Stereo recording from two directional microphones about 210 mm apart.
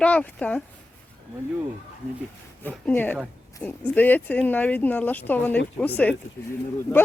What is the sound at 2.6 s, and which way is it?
Speech, 10° left (ahead or behind).